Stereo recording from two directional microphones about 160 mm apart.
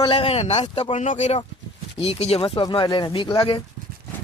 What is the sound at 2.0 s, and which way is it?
A man's voice, 40° left (ahead or behind).